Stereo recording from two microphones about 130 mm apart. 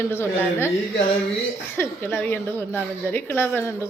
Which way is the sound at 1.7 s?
15° left (ahead or behind).